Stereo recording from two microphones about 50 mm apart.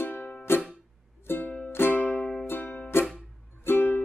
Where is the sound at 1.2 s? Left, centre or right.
Left.